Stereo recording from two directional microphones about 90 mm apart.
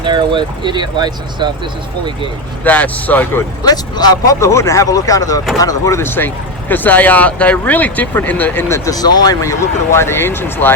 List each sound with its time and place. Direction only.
0.0 s speech: 60° right (ahead or behind)
2.6 s speech: 15° left (ahead or behind)
3.6 s speech: 50° left (ahead or behind)
4.4 s speech: 30° left (ahead or behind)
6.0 s speech: 25° left (ahead or behind)
8.8 s speech: 45° left (ahead or behind); by 10.8 s 25° left (ahead or behind)